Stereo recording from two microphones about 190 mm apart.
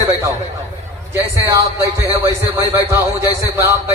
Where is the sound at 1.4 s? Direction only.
15° right (ahead or behind).